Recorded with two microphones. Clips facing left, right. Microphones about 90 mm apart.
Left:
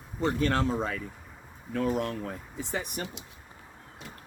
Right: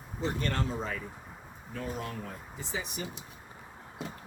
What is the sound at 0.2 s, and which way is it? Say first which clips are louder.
Speech: left 6 dB; 65° left (ahead or behind).